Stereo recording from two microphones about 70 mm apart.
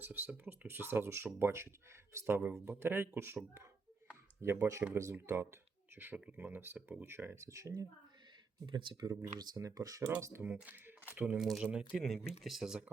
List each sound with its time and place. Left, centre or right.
0.0 s speech: right
6.1 s speech: centre; by 7.9 s right
8.7 s speech: right
9.6 s speech: right
10.2 s speech: right
10.4 s speech: right
11.3 s speech: centre